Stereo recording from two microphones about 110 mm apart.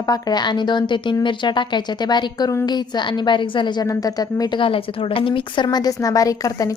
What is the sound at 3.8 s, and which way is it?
Speech, 35° left (ahead or behind).